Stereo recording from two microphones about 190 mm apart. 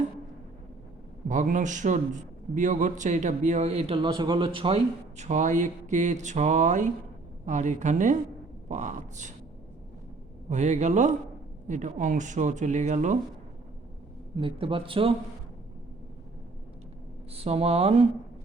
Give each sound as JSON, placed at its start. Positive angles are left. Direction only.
{"t": 1.3, "sound": "a man's voice", "side_deg": -40}
{"t": 10.5, "sound": "a man's voice", "side_deg": -40}
{"t": 14.4, "sound": "a man's voice", "side_deg": -30}
{"t": 17.3, "sound": "a man's voice", "side_deg": -30}